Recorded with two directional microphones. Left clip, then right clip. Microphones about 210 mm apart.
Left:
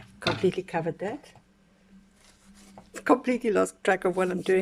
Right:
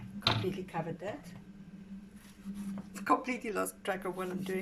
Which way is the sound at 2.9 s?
40° left (ahead or behind).